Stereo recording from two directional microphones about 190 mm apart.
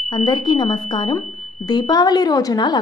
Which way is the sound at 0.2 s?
20° left (ahead or behind).